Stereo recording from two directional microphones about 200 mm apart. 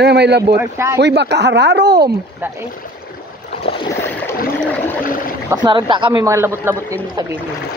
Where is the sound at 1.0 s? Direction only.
55° right (ahead or behind).